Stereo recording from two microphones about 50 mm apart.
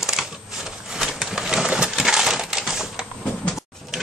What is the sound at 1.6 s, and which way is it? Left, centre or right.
Coin, centre.